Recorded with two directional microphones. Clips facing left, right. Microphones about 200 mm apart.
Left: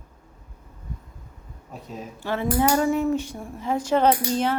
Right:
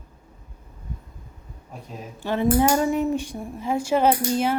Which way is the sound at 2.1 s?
15° right (ahead or behind).